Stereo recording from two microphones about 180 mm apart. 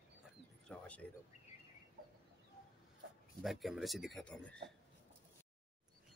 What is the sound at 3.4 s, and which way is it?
Speech, centre (ahead or behind).